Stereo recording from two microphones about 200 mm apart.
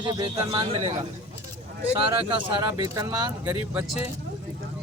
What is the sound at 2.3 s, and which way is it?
Speech, 25° right (ahead or behind).